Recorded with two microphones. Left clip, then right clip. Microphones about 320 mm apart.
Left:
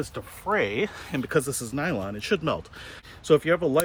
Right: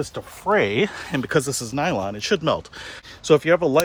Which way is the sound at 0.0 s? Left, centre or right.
Right.